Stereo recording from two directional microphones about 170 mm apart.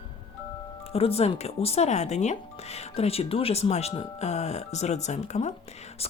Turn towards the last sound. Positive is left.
turn(degrees=40)  # may be behind; listen again after turning